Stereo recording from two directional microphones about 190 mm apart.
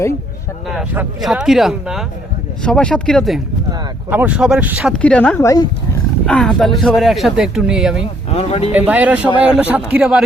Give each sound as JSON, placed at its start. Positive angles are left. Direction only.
{"t": 0.7, "sound": "speech", "side_deg": 0}
{"t": 5.4, "sound": "speech", "side_deg": 15}
{"t": 6.2, "sound": "speech", "side_deg": 5}
{"t": 8.3, "sound": "speech", "side_deg": 35}
{"t": 8.7, "sound": "a man's voice", "side_deg": -10}